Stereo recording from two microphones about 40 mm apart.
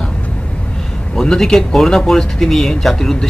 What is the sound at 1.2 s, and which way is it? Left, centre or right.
A man's voice, centre.